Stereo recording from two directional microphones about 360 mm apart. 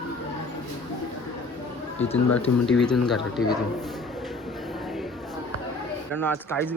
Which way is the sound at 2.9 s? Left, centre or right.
Centre.